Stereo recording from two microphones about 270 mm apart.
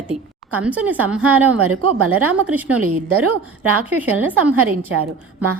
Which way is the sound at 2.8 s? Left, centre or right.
Right.